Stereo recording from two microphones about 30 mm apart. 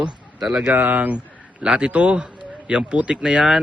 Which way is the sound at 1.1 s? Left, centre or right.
Right.